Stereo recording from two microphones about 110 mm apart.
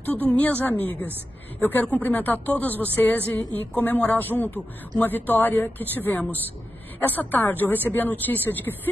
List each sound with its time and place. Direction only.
0.0 s speech: 15° left (ahead or behind)